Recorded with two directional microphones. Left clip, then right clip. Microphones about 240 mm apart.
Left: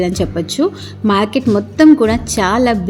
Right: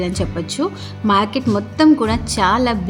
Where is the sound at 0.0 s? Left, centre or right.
Centre.